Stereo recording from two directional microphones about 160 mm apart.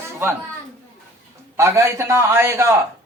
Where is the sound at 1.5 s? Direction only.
15° right (ahead or behind).